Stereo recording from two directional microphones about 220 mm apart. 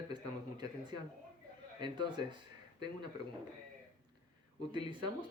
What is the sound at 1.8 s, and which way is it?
Speech, 20° right (ahead or behind).